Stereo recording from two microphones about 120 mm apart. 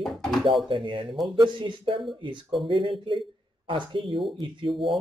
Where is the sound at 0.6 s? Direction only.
45° right (ahead or behind).